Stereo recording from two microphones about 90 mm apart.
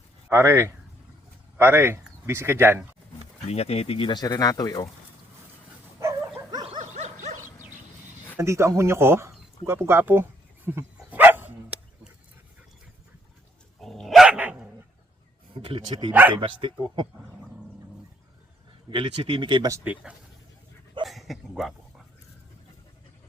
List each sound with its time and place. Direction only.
0.3 s speech: 30° right (ahead or behind)
3.4 s speech: 90° left
4.1 s speech: 50° left (ahead or behind)
8.4 s speech: 30° right (ahead or behind)
10.7 s dog: 20° right (ahead or behind)
13.8 s dog: centre (ahead or behind)
14.3 s dog: 15° right (ahead or behind)
15.5 s speech: 80° right
16.3 s speech: 65° right (ahead or behind)
18.9 s speech: 70° right (ahead or behind)
19.9 s speech: 20° right (ahead or behind)
21.0 s dog: centre (ahead or behind)